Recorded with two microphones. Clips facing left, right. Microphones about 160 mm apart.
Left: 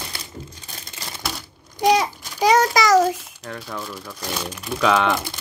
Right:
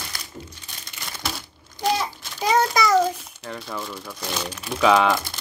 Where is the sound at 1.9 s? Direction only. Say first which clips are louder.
Left 6 dB; 85° left.